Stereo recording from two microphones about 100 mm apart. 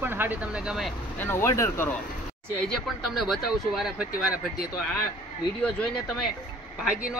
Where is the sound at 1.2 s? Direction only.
25° left (ahead or behind).